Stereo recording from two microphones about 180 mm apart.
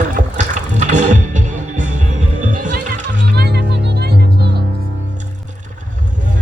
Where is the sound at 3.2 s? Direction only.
70° right (ahead or behind).